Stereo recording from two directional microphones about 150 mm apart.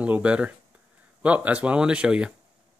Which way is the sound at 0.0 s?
10° right (ahead or behind).